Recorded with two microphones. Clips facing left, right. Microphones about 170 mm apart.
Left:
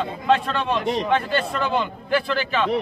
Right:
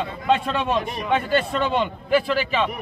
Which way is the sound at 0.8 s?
90° left.